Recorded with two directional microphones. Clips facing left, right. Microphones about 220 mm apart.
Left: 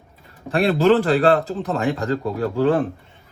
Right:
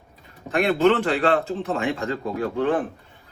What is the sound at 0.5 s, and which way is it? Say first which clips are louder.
A man's voice: left 3 dB; 30° left (ahead or behind).